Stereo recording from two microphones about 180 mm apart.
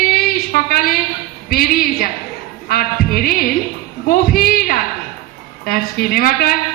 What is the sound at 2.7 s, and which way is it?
A man's voice, 55° left (ahead or behind).